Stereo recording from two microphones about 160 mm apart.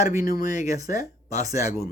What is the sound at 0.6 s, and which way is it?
Speech, 20° right (ahead or behind).